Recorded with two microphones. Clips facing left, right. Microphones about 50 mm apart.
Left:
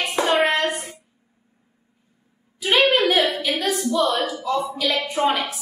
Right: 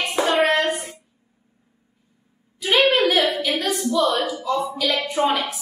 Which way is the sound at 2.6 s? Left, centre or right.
Centre.